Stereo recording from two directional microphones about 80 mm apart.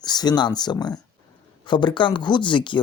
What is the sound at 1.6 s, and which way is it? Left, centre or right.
Speech, left.